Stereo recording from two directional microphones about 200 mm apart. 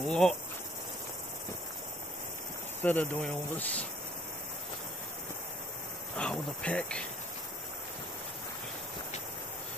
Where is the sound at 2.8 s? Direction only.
10° left (ahead or behind).